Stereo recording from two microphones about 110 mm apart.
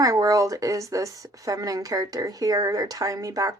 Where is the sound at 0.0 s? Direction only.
30° right (ahead or behind).